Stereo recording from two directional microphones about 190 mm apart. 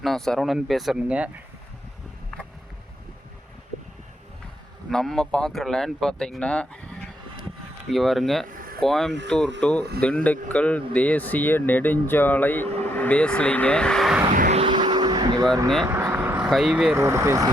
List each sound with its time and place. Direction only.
0.0 s speech: centre (ahead or behind)
4.9 s speech: 5° left (ahead or behind)
8.4 s a sound: 50° right (ahead or behind)
8.8 s speech: centre (ahead or behind)
14.5 s vehicle: 25° right (ahead or behind); by 16.5 s 10° right (ahead or behind)
16.5 s speech: centre (ahead or behind)
16.9 s speech: 15° right (ahead or behind)